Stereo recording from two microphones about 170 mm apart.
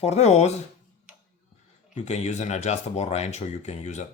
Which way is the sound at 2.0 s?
40° left (ahead or behind).